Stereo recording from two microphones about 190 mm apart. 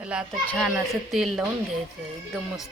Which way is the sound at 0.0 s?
5° right (ahead or behind).